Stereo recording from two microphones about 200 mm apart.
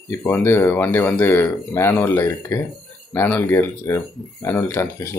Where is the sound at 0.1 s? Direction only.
10° left (ahead or behind).